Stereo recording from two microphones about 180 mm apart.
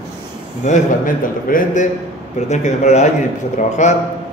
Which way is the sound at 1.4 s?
50° left (ahead or behind).